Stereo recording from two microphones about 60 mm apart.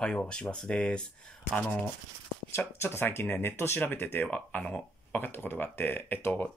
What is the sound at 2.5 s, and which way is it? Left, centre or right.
Speech, left.